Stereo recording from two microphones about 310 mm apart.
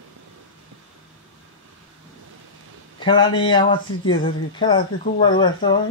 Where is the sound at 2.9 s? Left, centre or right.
Centre.